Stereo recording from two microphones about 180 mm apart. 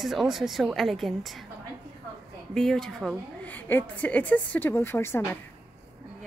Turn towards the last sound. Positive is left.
turn(degrees=10)  # may be behind; listen again after turning